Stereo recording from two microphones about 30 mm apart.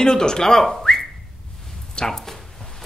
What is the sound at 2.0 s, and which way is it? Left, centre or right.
Speech, left.